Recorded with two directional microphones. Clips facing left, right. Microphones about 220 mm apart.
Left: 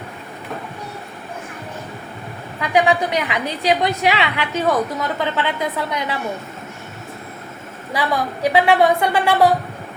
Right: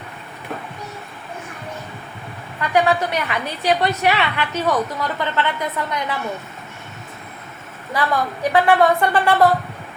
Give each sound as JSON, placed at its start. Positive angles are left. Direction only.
{"t": 2.6, "sound": "a woman's voice", "side_deg": 15}
{"t": 7.9, "sound": "a woman's voice", "side_deg": 10}